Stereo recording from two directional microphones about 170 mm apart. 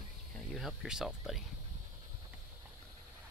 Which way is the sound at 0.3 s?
5° left (ahead or behind).